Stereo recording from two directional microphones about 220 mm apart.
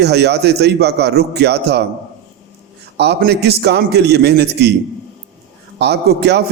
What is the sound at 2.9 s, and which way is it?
A man's voice, 50° right (ahead or behind).